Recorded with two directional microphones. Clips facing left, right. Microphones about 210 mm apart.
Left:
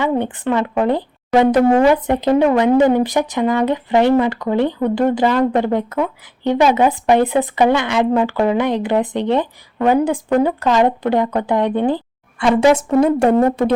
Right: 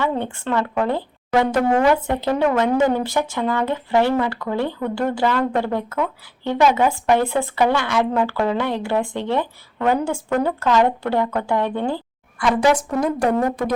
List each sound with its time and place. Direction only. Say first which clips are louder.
0.0 s speech: left 5 dB; 15° left (ahead or behind)